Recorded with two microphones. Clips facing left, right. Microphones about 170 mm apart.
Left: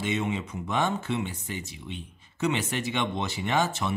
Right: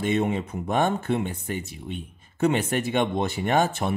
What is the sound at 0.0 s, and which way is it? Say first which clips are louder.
Speech: right 5 dB; 50° right (ahead or behind).